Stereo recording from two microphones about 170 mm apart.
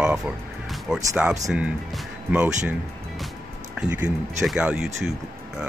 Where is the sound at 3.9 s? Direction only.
10° right (ahead or behind).